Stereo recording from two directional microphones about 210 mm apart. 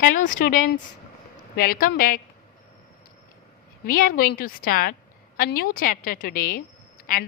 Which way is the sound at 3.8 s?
40° left (ahead or behind).